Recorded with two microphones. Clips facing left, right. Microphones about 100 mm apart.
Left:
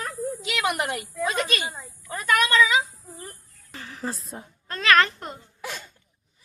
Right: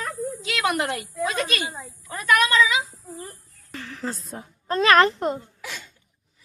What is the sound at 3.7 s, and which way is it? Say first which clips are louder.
Speech: right 1 dB; 20° left (ahead or behind).